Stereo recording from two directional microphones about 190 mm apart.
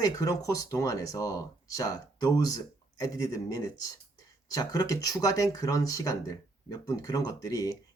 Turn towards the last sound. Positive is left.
turn(degrees=20)  # may be behind; listen again after turning